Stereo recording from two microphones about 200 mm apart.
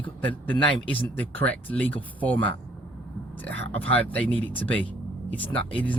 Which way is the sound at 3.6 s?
70° right (ahead or behind).